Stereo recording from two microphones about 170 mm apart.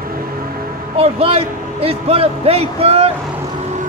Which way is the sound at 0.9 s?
35° right (ahead or behind).